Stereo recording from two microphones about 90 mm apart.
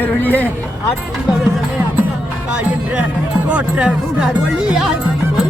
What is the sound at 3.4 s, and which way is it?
Speech, 10° right (ahead or behind).